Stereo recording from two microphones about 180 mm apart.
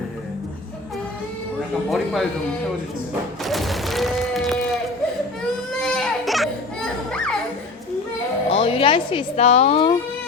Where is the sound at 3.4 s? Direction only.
Centre (ahead or behind).